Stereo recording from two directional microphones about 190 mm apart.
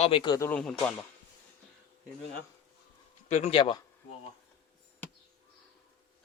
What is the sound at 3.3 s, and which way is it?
Speech, 35° left (ahead or behind).